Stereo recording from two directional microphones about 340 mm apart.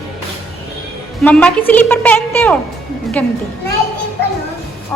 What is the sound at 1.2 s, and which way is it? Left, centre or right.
A woman's voice, centre.